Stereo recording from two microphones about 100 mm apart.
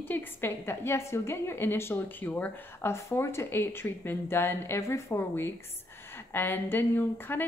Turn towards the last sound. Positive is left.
turn(degrees=20)  # may be behind; listen again after turning